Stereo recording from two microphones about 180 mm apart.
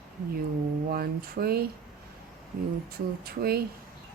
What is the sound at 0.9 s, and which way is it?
Speech, 55° right (ahead or behind).